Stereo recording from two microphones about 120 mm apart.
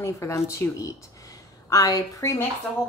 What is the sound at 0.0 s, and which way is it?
A woman's voice, 25° left (ahead or behind).